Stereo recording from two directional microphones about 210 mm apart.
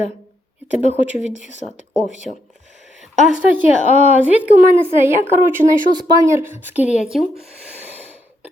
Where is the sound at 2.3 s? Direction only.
35° left (ahead or behind).